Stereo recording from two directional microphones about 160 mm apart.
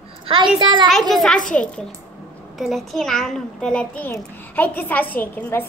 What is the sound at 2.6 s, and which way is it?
A child's voice, centre (ahead or behind).